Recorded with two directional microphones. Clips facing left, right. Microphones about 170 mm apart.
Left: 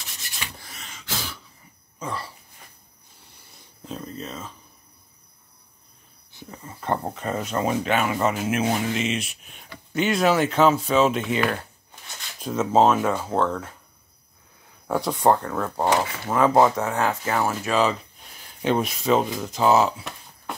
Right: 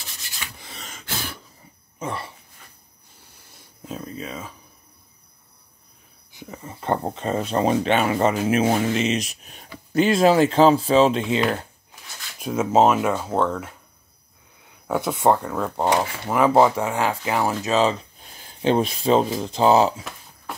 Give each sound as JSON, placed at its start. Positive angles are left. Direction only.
{"t": 0.6, "sound": "gasp", "side_deg": -25}
{"t": 0.8, "sound": "a sound", "side_deg": -55}
{"t": 2.0, "sound": "speech", "side_deg": -25}
{"t": 3.2, "sound": "a sound", "side_deg": -5}
{"t": 6.3, "sound": "speech", "side_deg": -20}
{"t": 11.9, "sound": "shuffling cards", "side_deg": -10}
{"t": 13.2, "sound": "speech", "side_deg": -10}
{"t": 14.9, "sound": "speech", "side_deg": -5}
{"t": 15.8, "sound": "speech", "side_deg": -20}
{"t": 16.3, "sound": "speech", "side_deg": -10}
{"t": 20.5, "sound": "music", "side_deg": 0}